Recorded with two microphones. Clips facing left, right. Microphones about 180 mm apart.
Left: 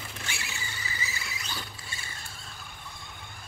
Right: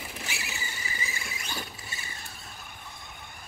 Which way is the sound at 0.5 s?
20° right (ahead or behind).